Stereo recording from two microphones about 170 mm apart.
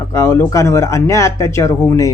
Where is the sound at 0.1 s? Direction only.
15° left (ahead or behind).